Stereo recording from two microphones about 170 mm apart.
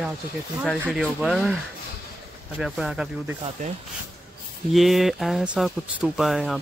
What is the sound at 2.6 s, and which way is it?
Speech, 5° right (ahead or behind).